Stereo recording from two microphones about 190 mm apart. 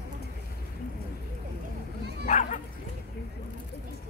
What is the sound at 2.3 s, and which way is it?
Speech, 40° left (ahead or behind).